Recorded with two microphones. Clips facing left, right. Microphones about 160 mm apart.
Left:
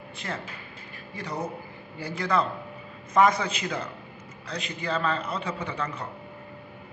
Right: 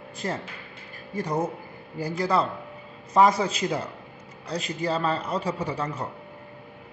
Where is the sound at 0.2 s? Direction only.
35° right (ahead or behind).